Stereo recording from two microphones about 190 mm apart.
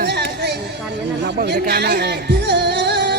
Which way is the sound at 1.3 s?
60° right (ahead or behind).